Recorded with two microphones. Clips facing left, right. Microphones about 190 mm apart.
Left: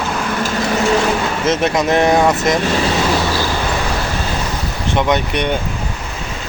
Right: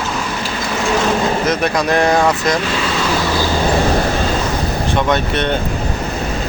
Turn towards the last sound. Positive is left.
turn(degrees=15)  # may be behind; listen again after turning